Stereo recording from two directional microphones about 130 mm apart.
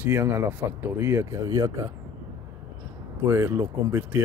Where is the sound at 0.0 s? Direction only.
15° right (ahead or behind).